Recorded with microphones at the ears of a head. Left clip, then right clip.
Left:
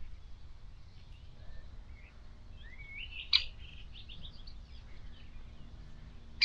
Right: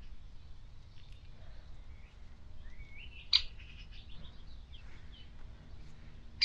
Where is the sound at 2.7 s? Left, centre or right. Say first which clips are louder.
Left 8 dB; left.